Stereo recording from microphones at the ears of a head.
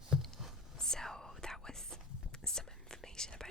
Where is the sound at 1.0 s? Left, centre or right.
Centre.